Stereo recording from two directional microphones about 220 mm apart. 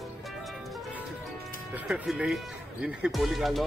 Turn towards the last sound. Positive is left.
turn(degrees=0)  # may be behind; listen again after turning